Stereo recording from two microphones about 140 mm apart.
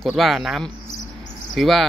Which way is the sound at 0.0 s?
Centre (ahead or behind).